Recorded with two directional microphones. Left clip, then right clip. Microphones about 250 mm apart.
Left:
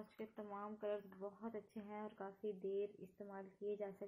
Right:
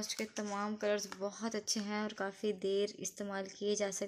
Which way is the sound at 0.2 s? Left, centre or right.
Right.